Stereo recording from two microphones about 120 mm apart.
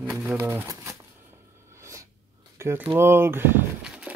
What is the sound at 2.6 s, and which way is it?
Speech, 20° right (ahead or behind).